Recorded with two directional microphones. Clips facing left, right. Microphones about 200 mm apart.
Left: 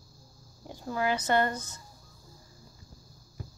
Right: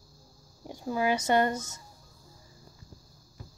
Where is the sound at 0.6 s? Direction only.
15° right (ahead or behind).